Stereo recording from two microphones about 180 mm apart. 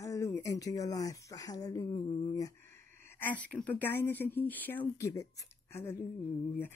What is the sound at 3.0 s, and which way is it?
Speech, 10° left (ahead or behind).